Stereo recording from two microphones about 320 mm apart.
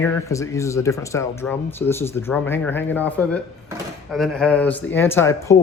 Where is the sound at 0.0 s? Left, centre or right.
Centre.